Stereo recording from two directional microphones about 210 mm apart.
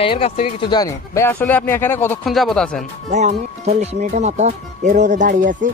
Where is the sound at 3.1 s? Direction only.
35° right (ahead or behind).